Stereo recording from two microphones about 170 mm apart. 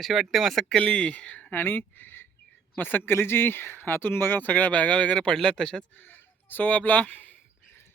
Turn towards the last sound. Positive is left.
turn(degrees=10)  # may be behind; listen again after turning